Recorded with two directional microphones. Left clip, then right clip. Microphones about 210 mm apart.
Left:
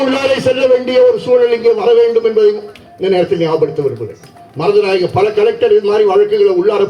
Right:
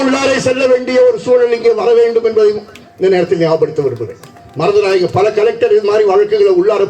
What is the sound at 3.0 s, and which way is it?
Speech, 35° right (ahead or behind).